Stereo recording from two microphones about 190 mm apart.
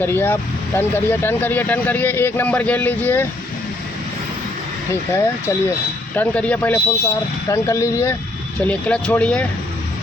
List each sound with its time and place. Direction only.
0.0 s speech: 10° left (ahead or behind)
5.1 s speech: 15° left (ahead or behind)